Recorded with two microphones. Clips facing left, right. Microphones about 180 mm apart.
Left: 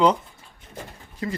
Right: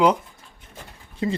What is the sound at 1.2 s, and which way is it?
Speech, 25° right (ahead or behind).